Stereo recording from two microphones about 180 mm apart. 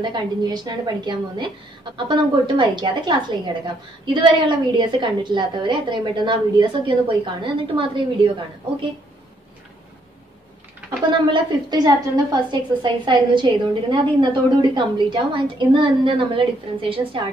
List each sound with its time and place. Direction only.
0.0 s a woman's voice: 25° right (ahead or behind)
11.1 s a woman's voice: 25° right (ahead or behind)